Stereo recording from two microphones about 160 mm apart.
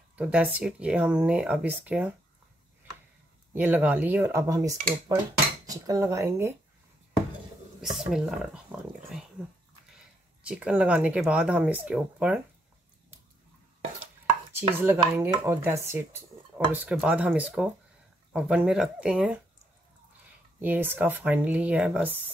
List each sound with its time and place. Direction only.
0.1 s speech: 5° right (ahead or behind)
3.5 s speech: 10° right (ahead or behind)
7.8 s speech: centre (ahead or behind)
10.4 s speech: 5° right (ahead or behind)
14.5 s chopping: 10° right (ahead or behind)
15.1 s speech: 15° right (ahead or behind)
20.6 s speech: 10° right (ahead or behind)